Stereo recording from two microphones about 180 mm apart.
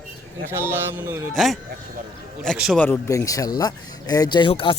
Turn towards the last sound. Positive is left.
turn(degrees=25)  # may be behind; listen again after turning